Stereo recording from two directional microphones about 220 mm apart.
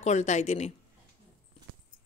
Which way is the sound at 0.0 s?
30° left (ahead or behind).